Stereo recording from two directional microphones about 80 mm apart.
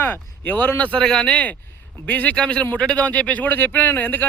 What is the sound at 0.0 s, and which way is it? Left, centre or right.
Speech, left.